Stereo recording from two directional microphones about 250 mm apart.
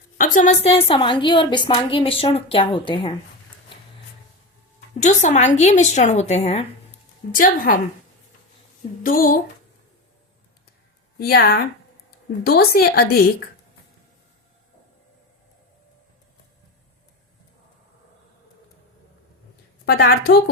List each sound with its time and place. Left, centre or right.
0.2 s a woman's voice: left
4.9 s a woman's voice: left
9.0 s a woman's voice: left
11.2 s a woman's voice: left
19.8 s a woman's voice: left